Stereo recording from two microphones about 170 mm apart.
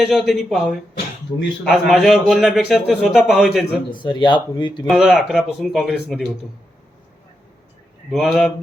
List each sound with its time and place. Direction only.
0.0 s a man's voice: centre (ahead or behind)
1.7 s a man's voice: centre (ahead or behind)
3.9 s speech: 25° left (ahead or behind)
4.9 s a man's voice: centre (ahead or behind)
8.1 s a man's voice: centre (ahead or behind)